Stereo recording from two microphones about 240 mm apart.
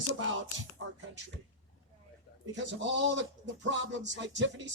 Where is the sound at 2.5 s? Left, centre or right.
Right.